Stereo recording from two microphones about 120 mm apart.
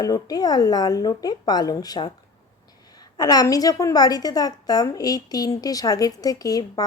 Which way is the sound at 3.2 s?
30° left (ahead or behind).